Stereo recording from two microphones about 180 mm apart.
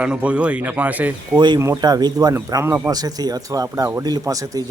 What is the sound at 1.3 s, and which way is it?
A man's voice, 25° right (ahead or behind).